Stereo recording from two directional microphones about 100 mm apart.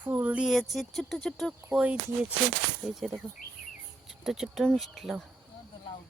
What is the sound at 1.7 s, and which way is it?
Speech, 15° right (ahead or behind).